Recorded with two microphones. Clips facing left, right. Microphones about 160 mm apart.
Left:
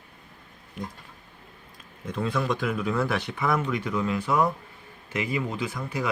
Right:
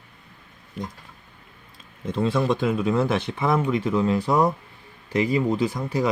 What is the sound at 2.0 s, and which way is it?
Speech, 25° right (ahead or behind).